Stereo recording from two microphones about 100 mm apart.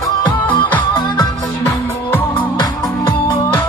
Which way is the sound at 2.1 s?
20° left (ahead or behind).